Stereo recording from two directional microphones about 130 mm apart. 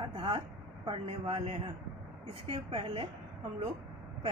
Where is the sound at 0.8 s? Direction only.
50° right (ahead or behind).